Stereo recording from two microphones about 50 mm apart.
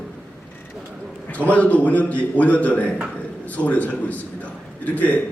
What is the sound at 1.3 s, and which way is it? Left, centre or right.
A man's voice, left.